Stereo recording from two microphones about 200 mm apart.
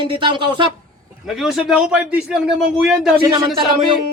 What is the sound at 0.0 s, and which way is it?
Speech, 25° right (ahead or behind).